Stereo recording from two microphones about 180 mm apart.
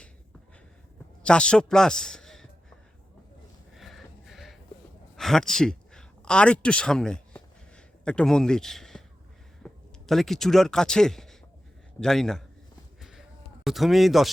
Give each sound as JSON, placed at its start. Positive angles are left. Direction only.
{"t": 1.2, "sound": "a man's voice", "side_deg": 5}
{"t": 3.8, "sound": "music", "side_deg": 0}
{"t": 5.1, "sound": "a sound", "side_deg": 5}
{"t": 9.6, "sound": "speech", "side_deg": 0}
{"t": 13.0, "sound": "a sound", "side_deg": 0}
{"t": 13.7, "sound": "speech", "side_deg": 0}